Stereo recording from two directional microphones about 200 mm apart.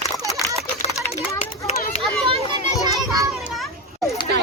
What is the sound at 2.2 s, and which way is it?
Children playing, 30° right (ahead or behind).